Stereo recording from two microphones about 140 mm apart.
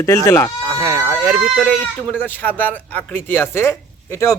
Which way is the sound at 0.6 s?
15° right (ahead or behind).